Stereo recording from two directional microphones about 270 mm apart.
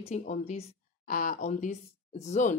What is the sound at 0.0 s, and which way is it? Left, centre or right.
A woman's voice, left.